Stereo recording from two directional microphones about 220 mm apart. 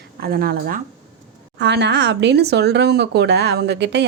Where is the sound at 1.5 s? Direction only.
50° right (ahead or behind).